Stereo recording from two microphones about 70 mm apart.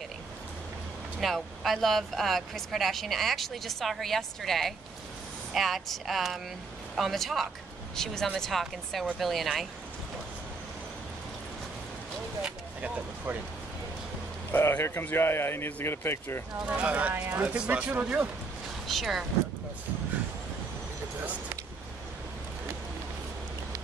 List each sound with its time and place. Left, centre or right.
1.2 s speech: centre
12.4 s vehicle: centre
14.5 s speech: left
16.6 s speech: centre
18.9 s speech: centre